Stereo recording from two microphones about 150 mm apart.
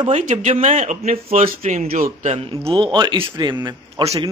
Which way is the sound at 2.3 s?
35° right (ahead or behind).